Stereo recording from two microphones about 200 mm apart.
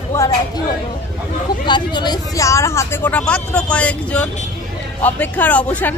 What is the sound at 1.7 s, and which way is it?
Speech, 20° left (ahead or behind).